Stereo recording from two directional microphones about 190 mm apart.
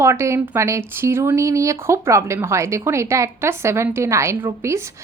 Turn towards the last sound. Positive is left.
turn(degrees=-15)  # may be behind; listen again after turning